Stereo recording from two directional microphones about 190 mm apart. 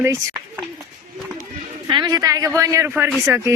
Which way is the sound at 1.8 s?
20° right (ahead or behind).